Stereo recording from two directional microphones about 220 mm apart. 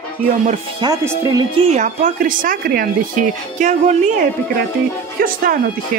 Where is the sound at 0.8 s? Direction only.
15° right (ahead or behind).